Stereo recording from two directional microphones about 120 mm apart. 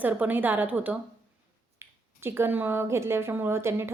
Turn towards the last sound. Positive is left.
turn(degrees=-20)  # may be behind; listen again after turning